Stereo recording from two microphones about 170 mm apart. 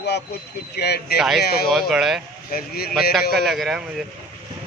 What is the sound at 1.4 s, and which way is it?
Speech, 65° left (ahead or behind).